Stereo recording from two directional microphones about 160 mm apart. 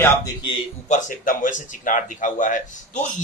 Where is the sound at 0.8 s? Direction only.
55° left (ahead or behind).